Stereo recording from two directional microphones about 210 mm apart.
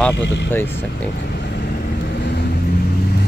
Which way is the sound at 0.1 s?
55° left (ahead or behind).